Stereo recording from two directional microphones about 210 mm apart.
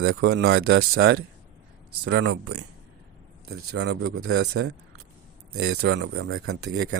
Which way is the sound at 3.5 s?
55° right (ahead or behind).